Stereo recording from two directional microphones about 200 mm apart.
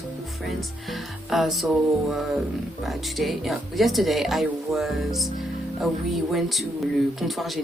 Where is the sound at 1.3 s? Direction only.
Centre (ahead or behind).